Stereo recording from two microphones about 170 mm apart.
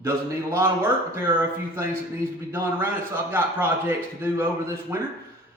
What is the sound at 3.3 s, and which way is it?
A man's voice, 10° right (ahead or behind).